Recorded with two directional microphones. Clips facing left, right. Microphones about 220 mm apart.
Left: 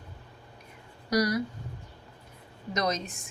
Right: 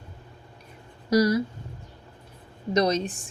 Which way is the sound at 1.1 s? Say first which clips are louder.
Right 6 dB; 25° right (ahead or behind).